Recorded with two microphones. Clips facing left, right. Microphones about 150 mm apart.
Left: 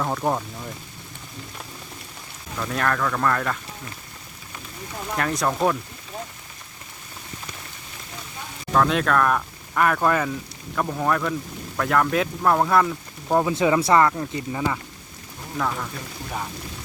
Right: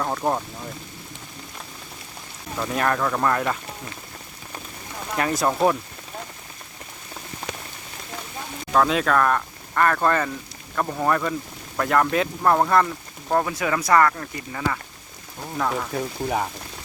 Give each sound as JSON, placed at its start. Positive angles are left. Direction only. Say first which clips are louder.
{"t": 0.0, "sound": "speech", "louder": "even", "side_deg": -5}
{"t": 2.6, "sound": "speech", "louder": "right 1 dB", "side_deg": -15}
{"t": 5.1, "sound": "speech", "louder": "right 2 dB", "side_deg": -5}
{"t": 8.7, "sound": "speech", "louder": "even", "side_deg": 0}
{"t": 13.4, "sound": "speech", "louder": "left 5 dB", "side_deg": 20}
{"t": 15.5, "sound": "speech", "louder": "right 1 dB", "side_deg": -5}